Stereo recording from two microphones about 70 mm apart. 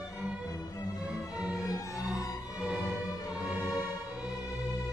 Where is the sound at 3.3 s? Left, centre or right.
Centre.